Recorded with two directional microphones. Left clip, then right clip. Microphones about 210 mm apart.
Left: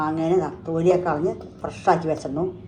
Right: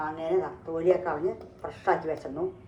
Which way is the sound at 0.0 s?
25° left (ahead or behind).